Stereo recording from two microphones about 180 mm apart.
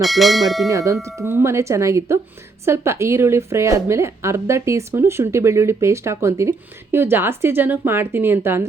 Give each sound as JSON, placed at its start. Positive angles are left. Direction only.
{"t": 0.0, "sound": "speech", "side_deg": 0}
{"t": 0.7, "sound": "a woman's voice", "side_deg": -15}